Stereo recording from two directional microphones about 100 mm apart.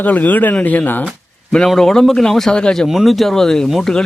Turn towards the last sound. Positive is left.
turn(degrees=5)  # may be behind; listen again after turning